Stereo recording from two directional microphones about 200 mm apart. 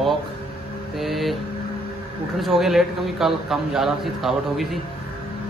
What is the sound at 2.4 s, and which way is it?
Speech, centre (ahead or behind).